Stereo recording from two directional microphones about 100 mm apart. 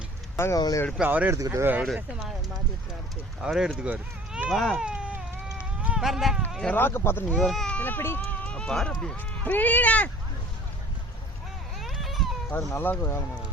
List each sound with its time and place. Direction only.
0.3 s speech: 25° left (ahead or behind)
1.0 s speech: 15° right (ahead or behind)
1.3 s speech: 30° right (ahead or behind)
1.6 s speech: 15° right (ahead or behind)
3.5 s speech: 5° right (ahead or behind)
4.9 s baby cry: 10° right (ahead or behind)
5.5 s a sound: 10° right (ahead or behind)
6.1 s speech: 5° right (ahead or behind)
6.7 s speech: 20° left (ahead or behind)
7.3 s speech: centre (ahead or behind)
7.8 s speech: 20° left (ahead or behind)
11.8 s baby cry: centre (ahead or behind)
12.5 s speech: 25° left (ahead or behind)